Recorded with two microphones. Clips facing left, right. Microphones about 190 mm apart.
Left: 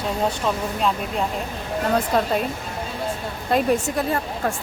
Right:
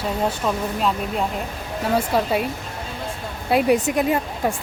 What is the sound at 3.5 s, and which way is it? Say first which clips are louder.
A woman's voice: right 2 dB; 15° right (ahead or behind).